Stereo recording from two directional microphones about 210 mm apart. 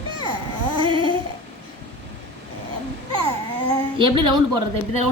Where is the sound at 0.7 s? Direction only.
25° right (ahead or behind).